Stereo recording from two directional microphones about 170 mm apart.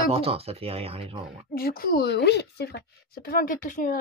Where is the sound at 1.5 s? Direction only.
60° left (ahead or behind).